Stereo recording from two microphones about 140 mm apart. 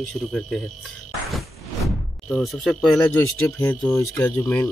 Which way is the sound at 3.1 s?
15° left (ahead or behind).